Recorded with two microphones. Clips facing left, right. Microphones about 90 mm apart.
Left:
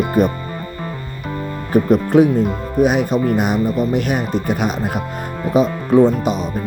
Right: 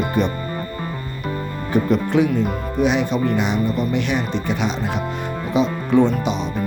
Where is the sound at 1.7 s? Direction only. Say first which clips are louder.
Left 4 dB; 45° left (ahead or behind).